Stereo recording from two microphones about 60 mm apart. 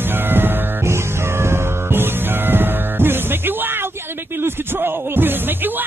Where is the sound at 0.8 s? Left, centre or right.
Right.